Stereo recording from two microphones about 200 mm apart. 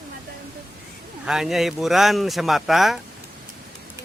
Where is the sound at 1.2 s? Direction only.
Centre (ahead or behind).